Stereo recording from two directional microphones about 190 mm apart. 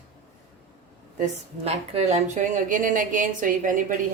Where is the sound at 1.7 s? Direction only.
35° right (ahead or behind).